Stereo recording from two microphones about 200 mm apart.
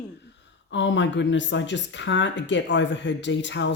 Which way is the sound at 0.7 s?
65° left (ahead or behind).